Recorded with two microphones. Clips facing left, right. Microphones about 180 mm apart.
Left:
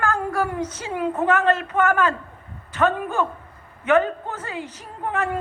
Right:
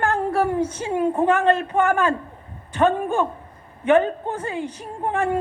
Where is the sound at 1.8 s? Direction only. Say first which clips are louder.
Left 1 dB; 25° right (ahead or behind).